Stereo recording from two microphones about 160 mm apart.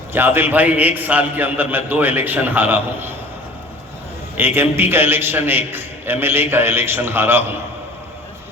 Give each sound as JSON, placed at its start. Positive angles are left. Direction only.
{"t": 0.1, "sound": "a man's voice", "side_deg": -15}
{"t": 4.4, "sound": "a man's voice", "side_deg": -15}